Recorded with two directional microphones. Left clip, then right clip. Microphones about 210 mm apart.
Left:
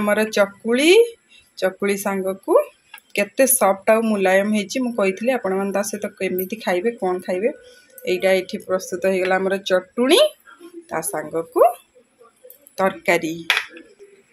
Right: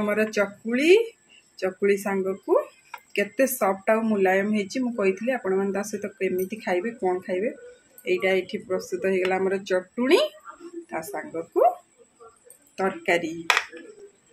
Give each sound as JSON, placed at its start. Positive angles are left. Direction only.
{"t": 0.0, "sound": "speech", "side_deg": 15}
{"t": 12.7, "sound": "speech", "side_deg": 20}